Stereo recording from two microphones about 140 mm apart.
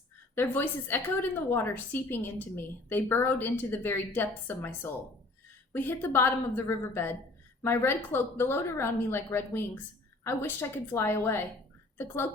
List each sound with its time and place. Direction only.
0.3 s a woman's voice: 15° left (ahead or behind)